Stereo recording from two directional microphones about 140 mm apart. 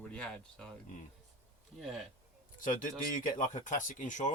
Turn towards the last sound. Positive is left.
turn(degrees=65)  # may be behind; listen again after turning